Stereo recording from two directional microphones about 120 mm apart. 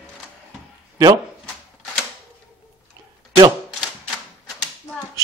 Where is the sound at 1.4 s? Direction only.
5° left (ahead or behind).